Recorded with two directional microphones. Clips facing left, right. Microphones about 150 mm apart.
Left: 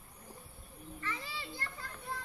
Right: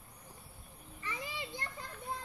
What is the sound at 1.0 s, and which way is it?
Children playing, 15° right (ahead or behind).